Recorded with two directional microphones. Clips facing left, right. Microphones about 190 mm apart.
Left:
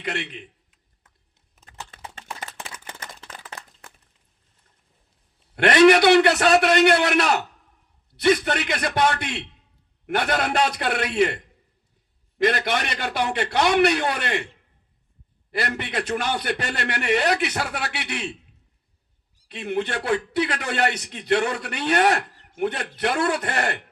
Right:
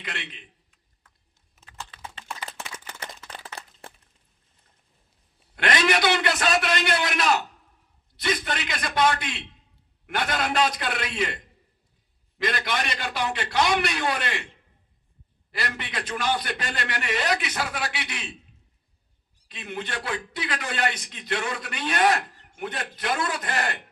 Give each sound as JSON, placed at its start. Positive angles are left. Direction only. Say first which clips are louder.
{"t": 0.1, "sound": "a man's voice", "louder": "left 9 dB", "side_deg": 55}
{"t": 1.9, "sound": "a sound", "louder": "left 1 dB", "side_deg": 45}
{"t": 3.3, "sound": "a sound", "louder": "even", "side_deg": -30}
{"t": 5.5, "sound": "a man's voice", "louder": "left 9 dB", "side_deg": 60}
{"t": 12.4, "sound": "a man's voice", "louder": "left 6 dB", "side_deg": 60}
{"t": 15.5, "sound": "a man's voice", "louder": "left 6 dB", "side_deg": 60}
{"t": 19.5, "sound": "a man's voice", "louder": "left 8 dB", "side_deg": 60}